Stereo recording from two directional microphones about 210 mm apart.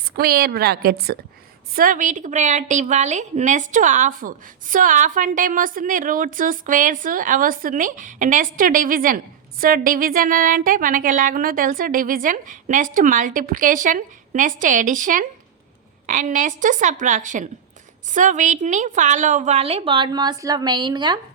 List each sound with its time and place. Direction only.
0.2 s a woman's voice: 45° right (ahead or behind); by 21.2 s 20° right (ahead or behind)